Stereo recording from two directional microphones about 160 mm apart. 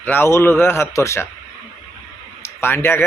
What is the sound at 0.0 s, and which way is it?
A man's voice, 10° left (ahead or behind).